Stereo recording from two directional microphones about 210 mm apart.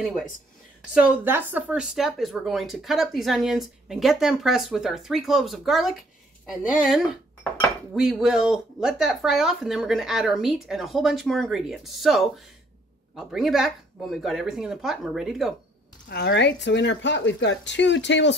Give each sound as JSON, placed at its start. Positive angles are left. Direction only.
{"t": 0.0, "sound": "speech", "side_deg": 0}
{"t": 7.9, "sound": "speech", "side_deg": 0}
{"t": 16.1, "sound": "speech", "side_deg": 50}